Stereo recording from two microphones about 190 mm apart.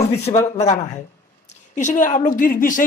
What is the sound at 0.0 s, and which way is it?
Speech, 35° left (ahead or behind).